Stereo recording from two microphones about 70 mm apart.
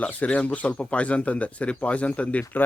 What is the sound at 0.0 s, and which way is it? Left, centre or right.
Speech, centre.